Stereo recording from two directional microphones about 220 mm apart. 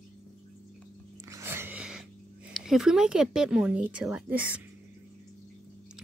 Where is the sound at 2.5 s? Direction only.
Centre (ahead or behind).